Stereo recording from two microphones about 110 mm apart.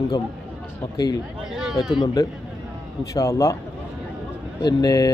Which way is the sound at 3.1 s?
30° left (ahead or behind).